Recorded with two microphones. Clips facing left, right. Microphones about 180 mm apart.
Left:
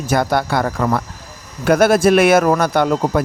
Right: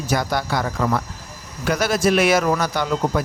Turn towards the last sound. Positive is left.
turn(degrees=55)  # may be behind; listen again after turning